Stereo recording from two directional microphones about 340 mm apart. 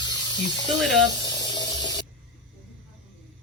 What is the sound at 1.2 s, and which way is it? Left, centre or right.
Spray, centre.